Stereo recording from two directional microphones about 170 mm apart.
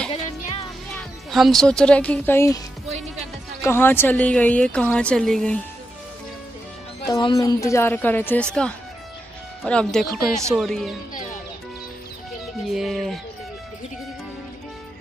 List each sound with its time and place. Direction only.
0.1 s music: 35° left (ahead or behind)
0.9 s speech: centre (ahead or behind)
3.6 s a woman's voice: 15° left (ahead or behind)
7.1 s a woman's voice: 25° left (ahead or behind); by 11.0 s centre (ahead or behind)
12.6 s speech: centre (ahead or behind)